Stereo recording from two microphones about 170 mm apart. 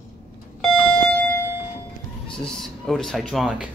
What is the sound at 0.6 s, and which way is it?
Alarm clock, 5° left (ahead or behind).